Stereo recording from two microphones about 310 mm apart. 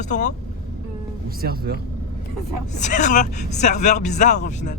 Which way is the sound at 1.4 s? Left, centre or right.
Right.